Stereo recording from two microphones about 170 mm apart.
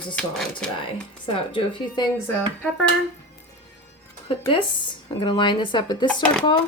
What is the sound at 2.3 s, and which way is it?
Speech, 5° left (ahead or behind).